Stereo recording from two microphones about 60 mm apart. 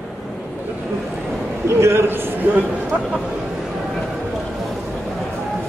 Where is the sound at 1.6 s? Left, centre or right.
Right.